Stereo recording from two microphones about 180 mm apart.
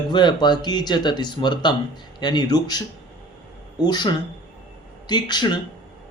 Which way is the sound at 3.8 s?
25° left (ahead or behind).